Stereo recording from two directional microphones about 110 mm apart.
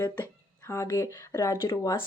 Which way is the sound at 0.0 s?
20° left (ahead or behind).